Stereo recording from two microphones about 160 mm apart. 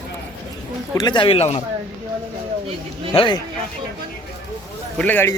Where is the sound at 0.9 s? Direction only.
25° left (ahead or behind).